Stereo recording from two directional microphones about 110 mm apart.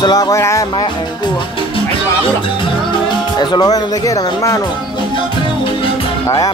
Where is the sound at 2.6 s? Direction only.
45° left (ahead or behind); by 4.6 s 30° left (ahead or behind).